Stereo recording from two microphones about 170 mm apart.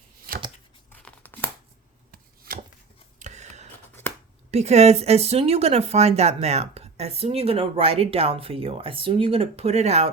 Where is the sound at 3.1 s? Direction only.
45° right (ahead or behind).